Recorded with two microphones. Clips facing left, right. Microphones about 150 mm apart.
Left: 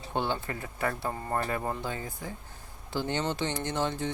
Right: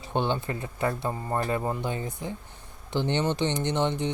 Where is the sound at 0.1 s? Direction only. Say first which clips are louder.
Right 4 dB; 20° right (ahead or behind).